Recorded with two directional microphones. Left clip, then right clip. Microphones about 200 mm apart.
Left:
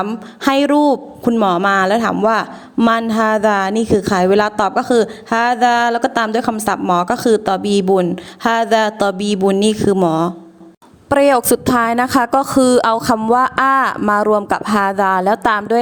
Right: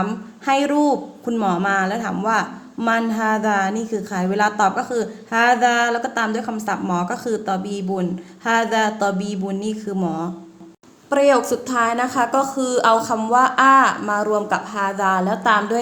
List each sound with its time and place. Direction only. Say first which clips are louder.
0.0 s a woman's voice: left 6 dB; 45° left (ahead or behind)